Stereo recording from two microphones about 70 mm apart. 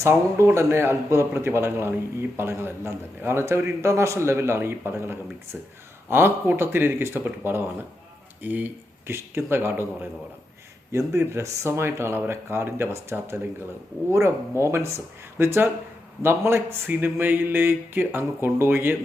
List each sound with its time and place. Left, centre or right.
0.5 s a man's voice: right